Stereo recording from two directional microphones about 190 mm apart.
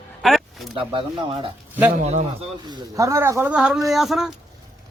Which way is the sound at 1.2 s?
25° right (ahead or behind).